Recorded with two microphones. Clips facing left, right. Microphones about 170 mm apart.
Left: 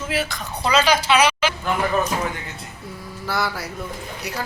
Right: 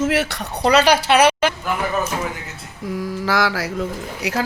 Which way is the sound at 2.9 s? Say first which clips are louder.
Right 9 dB; 90° right.